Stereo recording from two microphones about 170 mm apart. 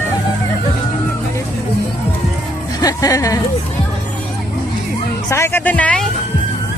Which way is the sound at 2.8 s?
20° left (ahead or behind).